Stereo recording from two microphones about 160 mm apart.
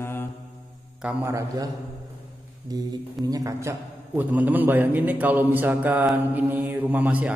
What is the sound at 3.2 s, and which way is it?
A man's voice, 20° right (ahead or behind).